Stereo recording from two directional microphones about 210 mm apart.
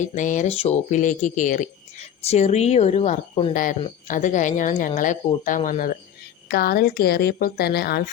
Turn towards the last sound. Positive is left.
turn(degrees=50)  # may be behind; listen again after turning